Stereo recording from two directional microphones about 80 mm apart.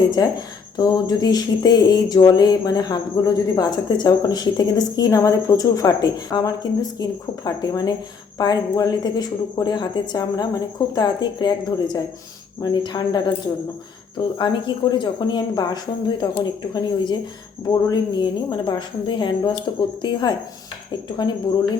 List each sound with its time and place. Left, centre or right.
0.2 s a woman's voice: left
14.3 s a woman's voice: left
17.7 s a woman's voice: left